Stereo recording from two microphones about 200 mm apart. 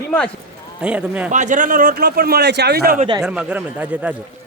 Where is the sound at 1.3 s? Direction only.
40° right (ahead or behind).